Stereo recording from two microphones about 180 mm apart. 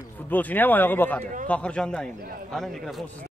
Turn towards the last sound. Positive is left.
turn(degrees=0)  # may be behind; listen again after turning